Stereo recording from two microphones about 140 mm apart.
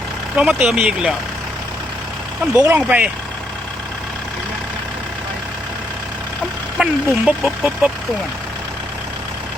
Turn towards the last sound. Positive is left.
turn(degrees=0)  # may be behind; listen again after turning